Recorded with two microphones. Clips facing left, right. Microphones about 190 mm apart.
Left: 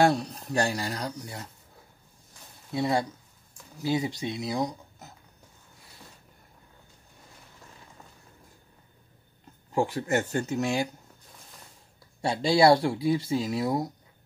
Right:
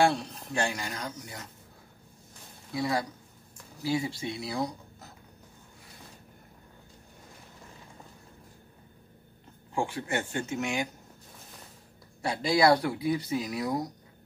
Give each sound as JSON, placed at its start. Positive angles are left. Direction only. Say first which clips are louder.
{"t": 0.0, "sound": "speech", "louder": "left 3 dB", "side_deg": 40}
{"t": 2.7, "sound": "speech", "louder": "left 3 dB", "side_deg": 25}
{"t": 9.8, "sound": "speech", "louder": "left 5 dB", "side_deg": 40}
{"t": 12.2, "sound": "speech", "louder": "left 3 dB", "side_deg": 25}